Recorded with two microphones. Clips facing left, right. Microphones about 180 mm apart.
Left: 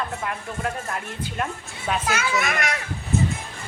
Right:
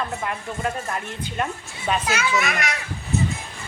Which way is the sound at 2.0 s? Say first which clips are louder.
Right 1 dB; 50° left (ahead or behind).